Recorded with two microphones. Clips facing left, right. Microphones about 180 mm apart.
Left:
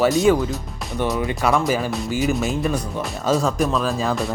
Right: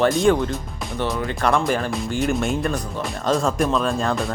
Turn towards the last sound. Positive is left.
turn(degrees=5)  # may be behind; listen again after turning